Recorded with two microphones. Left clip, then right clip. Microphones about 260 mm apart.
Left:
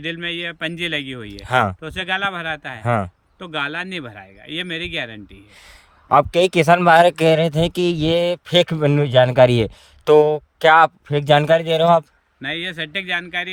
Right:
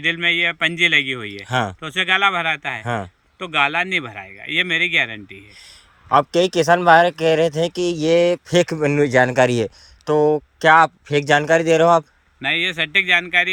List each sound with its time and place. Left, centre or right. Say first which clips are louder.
0.1 s speech: right 9 dB; centre
1.5 s speech: left 4 dB; left
1.8 s speech: right 5 dB; centre
2.8 s speech: left 4 dB; left
3.3 s speech: right 6 dB; centre
6.3 s speech: left 1 dB; left
12.4 s speech: right 6 dB; centre